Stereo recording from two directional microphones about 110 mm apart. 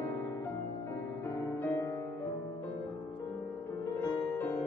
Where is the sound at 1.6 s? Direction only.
25° left (ahead or behind).